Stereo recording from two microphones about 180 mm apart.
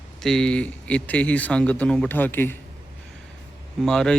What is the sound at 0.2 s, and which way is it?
Speech, 5° left (ahead or behind).